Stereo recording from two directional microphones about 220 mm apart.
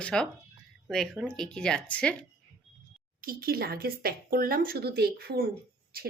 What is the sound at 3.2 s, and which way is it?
Speech, 40° right (ahead or behind).